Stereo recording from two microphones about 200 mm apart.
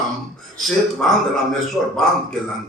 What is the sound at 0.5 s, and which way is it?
A man's voice, centre (ahead or behind).